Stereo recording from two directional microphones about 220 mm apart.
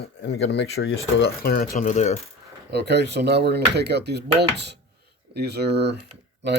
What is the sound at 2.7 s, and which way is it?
Speech, 50° right (ahead or behind).